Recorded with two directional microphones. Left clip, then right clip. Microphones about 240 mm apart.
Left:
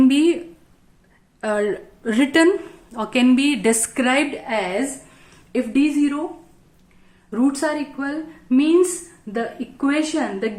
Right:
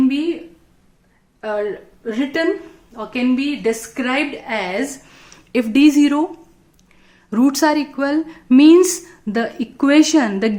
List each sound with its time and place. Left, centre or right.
0.1 s speech: left
1.4 s a woman's voice: left
4.0 s a woman's voice: centre
4.4 s a woman's voice: centre
5.5 s a woman's voice: right
7.3 s a woman's voice: right